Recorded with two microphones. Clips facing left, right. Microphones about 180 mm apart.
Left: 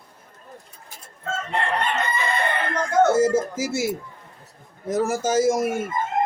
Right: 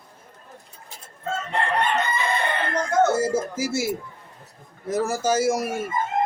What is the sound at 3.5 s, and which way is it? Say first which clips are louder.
Speech: even; 20° left (ahead or behind).